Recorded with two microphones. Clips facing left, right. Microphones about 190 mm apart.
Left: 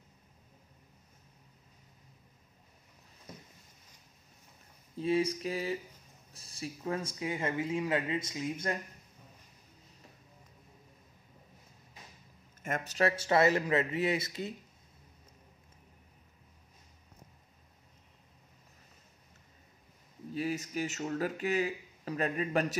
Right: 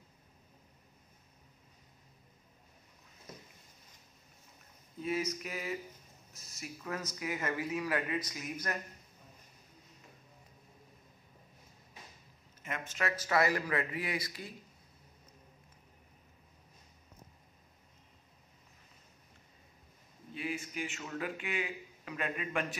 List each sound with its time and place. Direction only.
4.9 s a sound: 30° left (ahead or behind)
6.3 s speech: 30° left (ahead or behind)
12.6 s speech: 40° left (ahead or behind); by 14.5 s 25° left (ahead or behind)
20.3 s speech: 40° left (ahead or behind)